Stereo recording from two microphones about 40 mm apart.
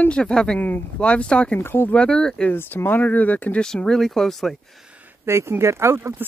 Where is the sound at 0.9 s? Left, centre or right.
Left.